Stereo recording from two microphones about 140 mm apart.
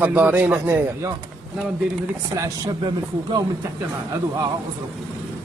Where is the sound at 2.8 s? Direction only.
35° right (ahead or behind).